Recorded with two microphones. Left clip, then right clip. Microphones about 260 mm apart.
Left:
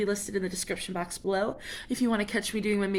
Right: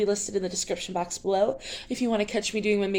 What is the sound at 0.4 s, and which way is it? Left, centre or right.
Speech, left.